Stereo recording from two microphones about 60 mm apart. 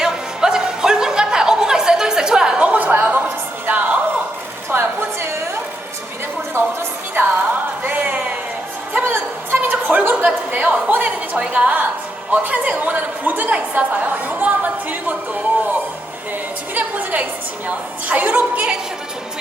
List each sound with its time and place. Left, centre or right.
0.0 s music: centre
4.7 s a sound: right
7.2 s music: right
7.9 s a sound: right
11.5 s a woman's voice: right
16.7 s a woman's voice: right